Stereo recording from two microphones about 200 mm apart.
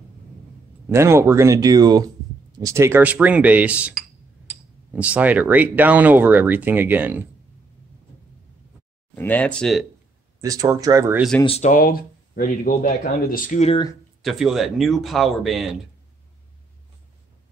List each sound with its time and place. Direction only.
0.8 s speech: 15° right (ahead or behind)
9.1 s speech: 10° left (ahead or behind)
10.4 s speech: 15° right (ahead or behind)
11.4 s speech: 35° left (ahead or behind)
14.2 s speech: centre (ahead or behind)